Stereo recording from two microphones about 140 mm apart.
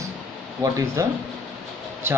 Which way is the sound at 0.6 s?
25° right (ahead or behind).